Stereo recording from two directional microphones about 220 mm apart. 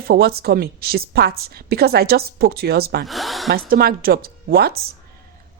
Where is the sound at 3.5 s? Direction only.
45° right (ahead or behind).